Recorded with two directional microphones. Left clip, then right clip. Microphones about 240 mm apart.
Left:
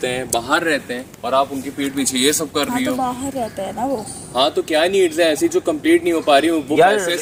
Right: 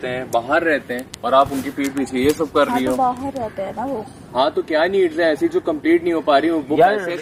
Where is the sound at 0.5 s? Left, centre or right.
Centre.